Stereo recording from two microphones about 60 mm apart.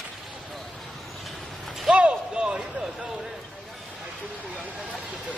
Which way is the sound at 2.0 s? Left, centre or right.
Centre.